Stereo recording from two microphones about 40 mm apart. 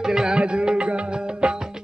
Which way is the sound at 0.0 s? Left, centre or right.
Centre.